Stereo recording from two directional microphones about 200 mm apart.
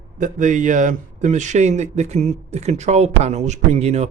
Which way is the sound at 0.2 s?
40° right (ahead or behind).